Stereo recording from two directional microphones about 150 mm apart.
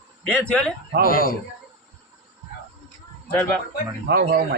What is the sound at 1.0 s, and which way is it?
Speech, 75° left (ahead or behind).